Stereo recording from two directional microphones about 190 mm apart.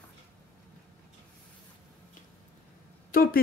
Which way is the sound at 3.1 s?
50° left (ahead or behind).